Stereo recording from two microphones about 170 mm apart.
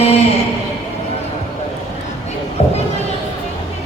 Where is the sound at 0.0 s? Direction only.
40° left (ahead or behind).